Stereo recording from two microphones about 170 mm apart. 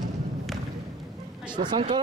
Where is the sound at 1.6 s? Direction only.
30° right (ahead or behind).